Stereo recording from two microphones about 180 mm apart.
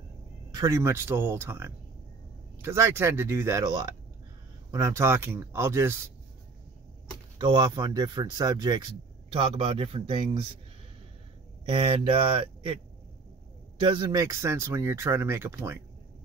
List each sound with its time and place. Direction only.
0.5 s speech: 20° right (ahead or behind)
7.3 s speech: 25° right (ahead or behind)
11.6 s speech: 30° right (ahead or behind); by 15.8 s 15° right (ahead or behind)